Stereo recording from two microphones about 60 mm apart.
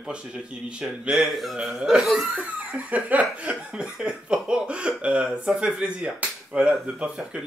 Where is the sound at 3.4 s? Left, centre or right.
Centre.